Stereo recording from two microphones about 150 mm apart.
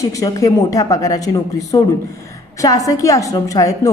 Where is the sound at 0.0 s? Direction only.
20° left (ahead or behind).